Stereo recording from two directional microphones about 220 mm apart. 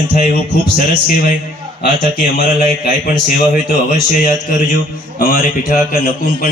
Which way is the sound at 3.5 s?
40° left (ahead or behind).